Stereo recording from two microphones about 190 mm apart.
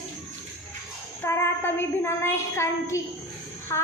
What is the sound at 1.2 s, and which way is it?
Child singing, 10° left (ahead or behind).